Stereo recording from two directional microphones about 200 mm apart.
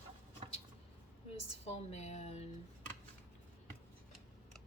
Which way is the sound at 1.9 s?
35° left (ahead or behind).